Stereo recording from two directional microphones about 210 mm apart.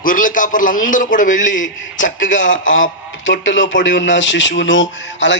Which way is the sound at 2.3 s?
65° left (ahead or behind).